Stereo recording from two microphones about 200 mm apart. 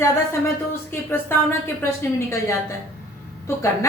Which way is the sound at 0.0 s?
10° left (ahead or behind).